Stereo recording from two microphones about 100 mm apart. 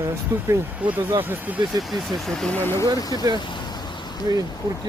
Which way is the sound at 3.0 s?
40° left (ahead or behind).